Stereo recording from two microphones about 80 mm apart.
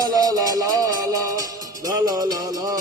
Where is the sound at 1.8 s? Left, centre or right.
Right.